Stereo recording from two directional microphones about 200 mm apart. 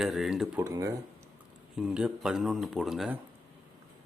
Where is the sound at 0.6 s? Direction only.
15° right (ahead or behind).